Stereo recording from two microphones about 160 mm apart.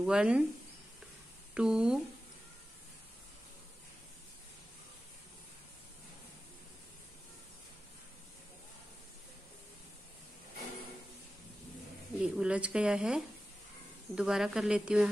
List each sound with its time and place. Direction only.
0.0 s speech: 5° right (ahead or behind)
1.5 s speech: 5° right (ahead or behind)
12.2 s speech: 5° right (ahead or behind)